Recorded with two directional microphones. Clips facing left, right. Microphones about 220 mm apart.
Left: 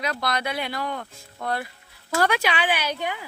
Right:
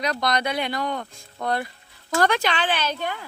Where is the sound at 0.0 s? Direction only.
5° left (ahead or behind).